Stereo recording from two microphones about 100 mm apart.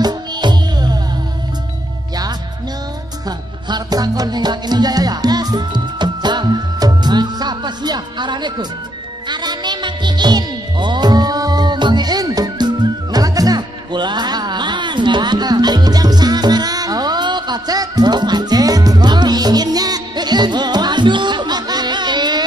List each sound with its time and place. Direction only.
0.0 s music: 45° right (ahead or behind)
3.3 s music: 45° right (ahead or behind)